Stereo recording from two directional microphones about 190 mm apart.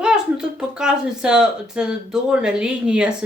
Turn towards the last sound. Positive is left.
turn(degrees=-5)  # may be behind; listen again after turning